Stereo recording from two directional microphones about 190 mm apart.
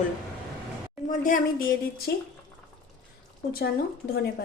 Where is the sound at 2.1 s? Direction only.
60° left (ahead or behind).